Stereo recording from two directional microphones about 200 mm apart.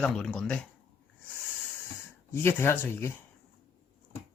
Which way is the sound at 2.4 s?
10° left (ahead or behind).